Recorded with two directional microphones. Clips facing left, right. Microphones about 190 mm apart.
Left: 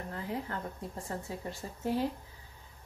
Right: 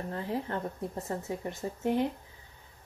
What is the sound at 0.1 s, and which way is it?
Speech, 30° right (ahead or behind).